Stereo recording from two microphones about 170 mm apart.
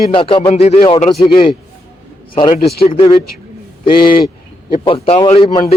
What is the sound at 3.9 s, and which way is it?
Speech, 60° left (ahead or behind).